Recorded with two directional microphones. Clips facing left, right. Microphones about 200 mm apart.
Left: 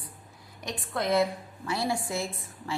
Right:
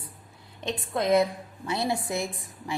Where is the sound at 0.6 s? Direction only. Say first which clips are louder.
Right 3 dB; 20° right (ahead or behind).